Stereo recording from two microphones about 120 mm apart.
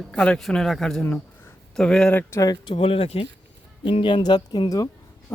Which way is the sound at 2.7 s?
50° left (ahead or behind).